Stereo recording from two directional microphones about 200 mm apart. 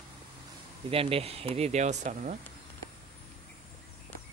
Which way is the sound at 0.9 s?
30° right (ahead or behind).